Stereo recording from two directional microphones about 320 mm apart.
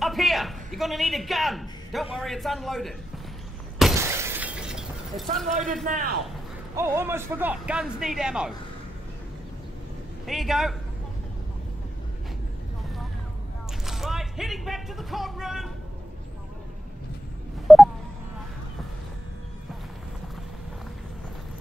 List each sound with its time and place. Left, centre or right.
0.0 s a man's voice: centre
3.7 s shatter: centre
5.9 s a man's voice: right
6.7 s a man's voice: centre
10.2 s a man's voice: centre
13.8 s speech: centre
17.7 s a sound: centre